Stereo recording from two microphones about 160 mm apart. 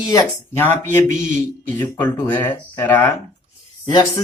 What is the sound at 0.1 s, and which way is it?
Speech, 20° left (ahead or behind).